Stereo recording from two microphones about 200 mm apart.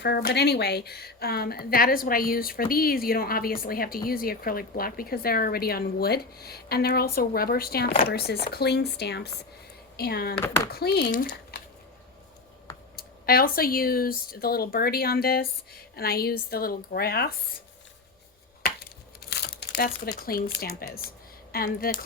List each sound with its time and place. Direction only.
0.0 s a woman's voice: 55° left (ahead or behind)
10.3 s speech: 10° left (ahead or behind)
10.7 s a woman's voice: 55° left (ahead or behind)
13.0 s a woman's voice: 50° left (ahead or behind)
19.3 s a woman's voice: 55° left (ahead or behind)